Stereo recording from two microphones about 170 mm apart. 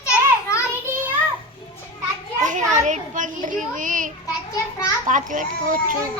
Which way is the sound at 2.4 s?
45° right (ahead or behind).